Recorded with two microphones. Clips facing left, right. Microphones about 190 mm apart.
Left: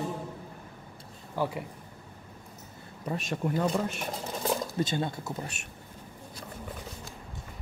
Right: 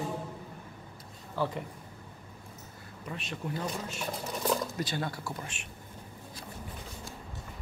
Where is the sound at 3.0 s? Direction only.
40° left (ahead or behind).